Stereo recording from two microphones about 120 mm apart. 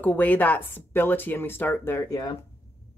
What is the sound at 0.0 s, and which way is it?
Speech, 15° left (ahead or behind).